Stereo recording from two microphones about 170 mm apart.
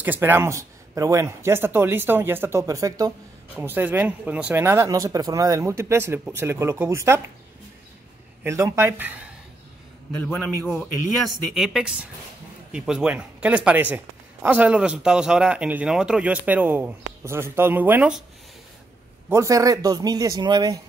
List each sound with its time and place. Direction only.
0.0 s speech: 10° right (ahead or behind)
8.5 s speech: 15° right (ahead or behind)
10.2 s a woman's voice: 5° left (ahead or behind)
19.2 s speech: 15° right (ahead or behind)